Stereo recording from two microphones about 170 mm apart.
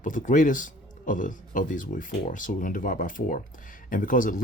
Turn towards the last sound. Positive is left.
turn(degrees=55)  # may be behind; listen again after turning